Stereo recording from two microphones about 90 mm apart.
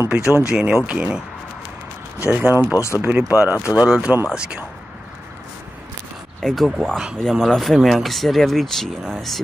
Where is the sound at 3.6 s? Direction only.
10° right (ahead or behind).